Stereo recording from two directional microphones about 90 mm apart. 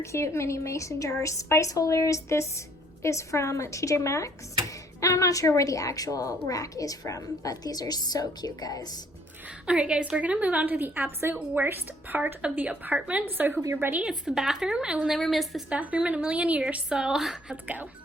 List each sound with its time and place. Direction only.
0.0 s a woman's voice: 30° left (ahead or behind)
9.6 s a woman's voice: 10° right (ahead or behind)
14.0 s a woman's voice: 5° right (ahead or behind)
15.7 s a woman's voice: 15° right (ahead or behind)